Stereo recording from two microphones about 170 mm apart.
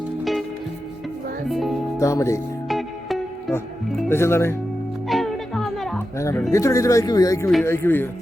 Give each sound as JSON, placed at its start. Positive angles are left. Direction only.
{"t": 1.5, "sound": "music", "side_deg": 0}
{"t": 2.0, "sound": "a man's voice", "side_deg": 15}
{"t": 2.6, "sound": "music", "side_deg": 0}
{"t": 4.1, "sound": "a man's voice", "side_deg": 15}
{"t": 5.0, "sound": "music", "side_deg": 0}
{"t": 6.1, "sound": "a man's voice", "side_deg": 15}